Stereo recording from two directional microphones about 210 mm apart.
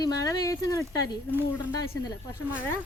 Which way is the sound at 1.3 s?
10° right (ahead or behind).